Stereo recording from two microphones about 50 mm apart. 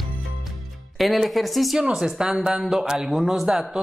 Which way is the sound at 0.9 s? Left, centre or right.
Centre.